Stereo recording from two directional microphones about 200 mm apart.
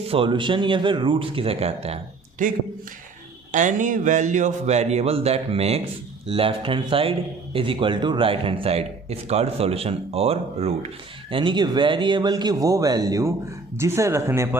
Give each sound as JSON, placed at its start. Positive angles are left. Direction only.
{"t": 0.1, "sound": "a man's voice", "side_deg": -25}